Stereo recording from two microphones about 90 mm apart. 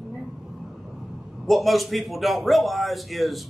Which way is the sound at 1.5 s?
Centre (ahead or behind).